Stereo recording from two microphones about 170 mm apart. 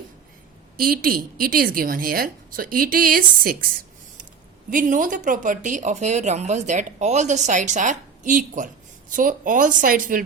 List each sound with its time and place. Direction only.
0.8 s a woman's voice: 60° right (ahead or behind)
4.7 s speech: 50° right (ahead or behind)